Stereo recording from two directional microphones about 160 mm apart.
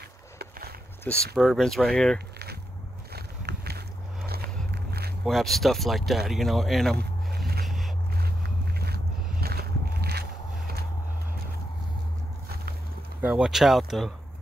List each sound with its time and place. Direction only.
0.4 s walk: 75° right (ahead or behind)
1.0 s speech: centre (ahead or behind)
2.1 s a sound: 85° right
5.2 s speech: centre (ahead or behind)
7.6 s boat: centre (ahead or behind)
8.7 s music: 80° right
13.2 s speech: 5° right (ahead or behind)